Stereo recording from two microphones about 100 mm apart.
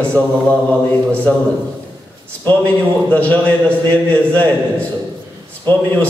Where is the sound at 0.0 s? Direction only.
10° left (ahead or behind).